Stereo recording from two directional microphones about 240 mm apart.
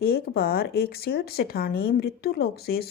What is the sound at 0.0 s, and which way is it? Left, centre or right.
Speech, left.